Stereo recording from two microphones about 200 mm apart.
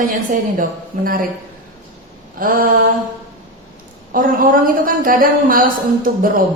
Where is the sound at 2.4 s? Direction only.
45° right (ahead or behind).